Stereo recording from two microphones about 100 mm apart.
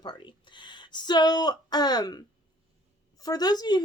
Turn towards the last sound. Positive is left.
turn(degrees=40)  # may be behind; listen again after turning